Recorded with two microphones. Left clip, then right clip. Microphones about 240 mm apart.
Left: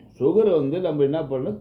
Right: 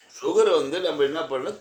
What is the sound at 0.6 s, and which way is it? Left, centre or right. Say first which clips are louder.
Speech: left 1 dB; right.